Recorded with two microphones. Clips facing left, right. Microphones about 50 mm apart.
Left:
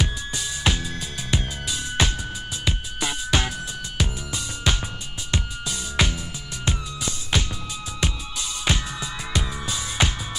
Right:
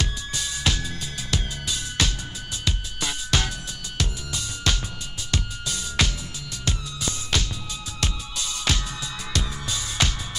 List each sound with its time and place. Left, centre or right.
0.0 s music: centre